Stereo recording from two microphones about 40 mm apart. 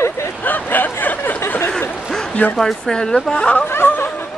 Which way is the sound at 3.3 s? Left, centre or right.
Left.